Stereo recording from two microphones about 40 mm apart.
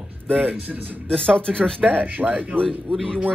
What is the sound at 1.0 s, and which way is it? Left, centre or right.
Speech, left.